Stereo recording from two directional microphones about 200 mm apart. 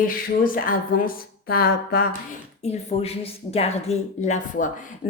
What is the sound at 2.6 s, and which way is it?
A woman's voice, 30° left (ahead or behind).